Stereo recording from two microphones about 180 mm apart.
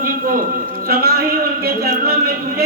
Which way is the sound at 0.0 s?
50° right (ahead or behind).